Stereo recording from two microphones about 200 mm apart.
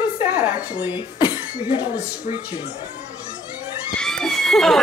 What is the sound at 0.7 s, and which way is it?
Speech, 20° left (ahead or behind).